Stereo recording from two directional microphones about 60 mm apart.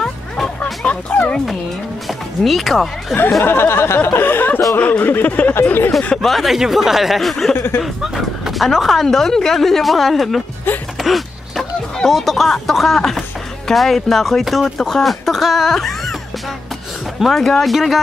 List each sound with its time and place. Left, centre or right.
0.0 s music: centre
2.0 s speech: centre
3.4 s a sound: left
4.7 s speech: left
5.5 s a sound: left
6.2 s speech: centre
7.5 s a sound: left
7.8 s speech: centre
17.2 s speech: centre